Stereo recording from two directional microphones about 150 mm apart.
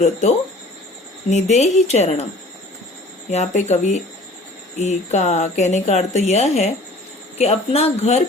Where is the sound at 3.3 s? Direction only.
50° left (ahead or behind).